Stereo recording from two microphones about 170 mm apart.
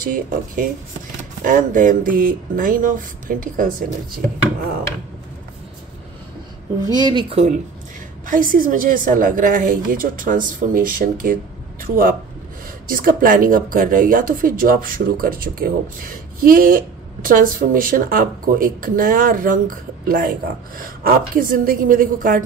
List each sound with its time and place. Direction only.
0.0 s a woman's voice: 55° right (ahead or behind)
6.9 s speech: 25° right (ahead or behind)
8.3 s a woman's voice: 55° right (ahead or behind)